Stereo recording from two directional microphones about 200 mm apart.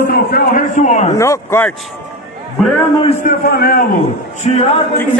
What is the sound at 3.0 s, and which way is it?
Speech, 30° left (ahead or behind).